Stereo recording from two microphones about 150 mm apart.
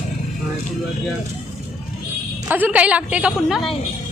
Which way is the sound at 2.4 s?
10° right (ahead or behind).